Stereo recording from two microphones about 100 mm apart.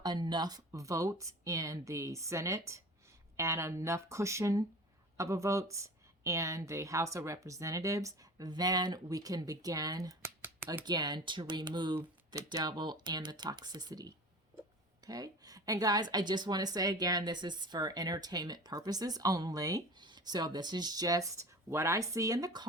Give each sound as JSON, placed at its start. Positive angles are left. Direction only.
{"t": 0.0, "sound": "speech", "side_deg": -45}
{"t": 0.7, "sound": "a woman's voice", "side_deg": -30}
{"t": 12.3, "sound": "a woman's voice", "side_deg": -35}